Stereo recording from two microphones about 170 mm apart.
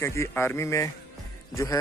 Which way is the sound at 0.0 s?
15° left (ahead or behind).